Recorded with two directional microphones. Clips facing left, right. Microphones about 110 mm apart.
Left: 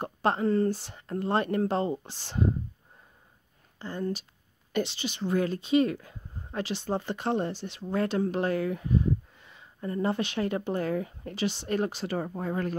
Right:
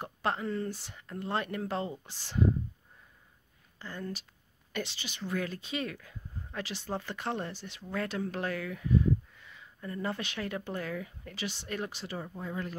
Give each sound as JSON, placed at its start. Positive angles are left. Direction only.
{"t": 0.0, "sound": "speech", "side_deg": 35}
{"t": 3.8, "sound": "speech", "side_deg": 25}
{"t": 12.1, "sound": "speech", "side_deg": 55}